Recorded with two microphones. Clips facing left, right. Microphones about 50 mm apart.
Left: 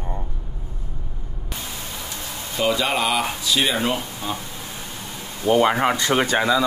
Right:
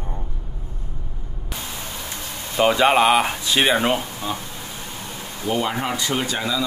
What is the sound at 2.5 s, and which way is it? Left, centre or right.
Speech, right.